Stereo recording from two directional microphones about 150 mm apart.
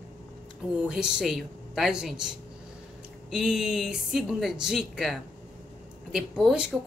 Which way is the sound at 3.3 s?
5° right (ahead or behind).